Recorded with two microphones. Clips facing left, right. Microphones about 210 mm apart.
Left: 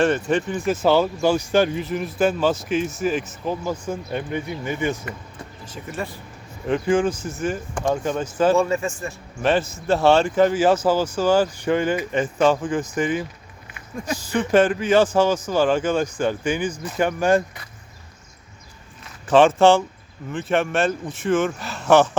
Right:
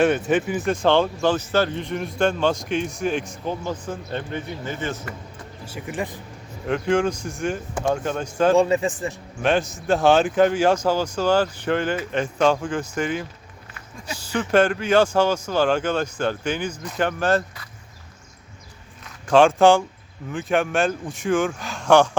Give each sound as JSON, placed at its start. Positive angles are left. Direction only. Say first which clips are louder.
{"t": 0.3, "sound": "speech", "louder": "right 1 dB", "side_deg": -5}
{"t": 0.7, "sound": "speech", "louder": "left 1 dB", "side_deg": 5}
{"t": 1.8, "sound": "speech", "louder": "left 1 dB", "side_deg": 5}
{"t": 5.6, "sound": "speech", "louder": "right 2 dB", "side_deg": -10}
{"t": 6.7, "sound": "speech", "louder": "left 1 dB", "side_deg": 5}
{"t": 8.5, "sound": "speech", "louder": "right 2 dB", "side_deg": -15}
{"t": 9.4, "sound": "speech", "louder": "left 1 dB", "side_deg": 0}
{"t": 14.3, "sound": "speech", "louder": "left 1 dB", "side_deg": 5}
{"t": 19.3, "sound": "speech", "louder": "even", "side_deg": 5}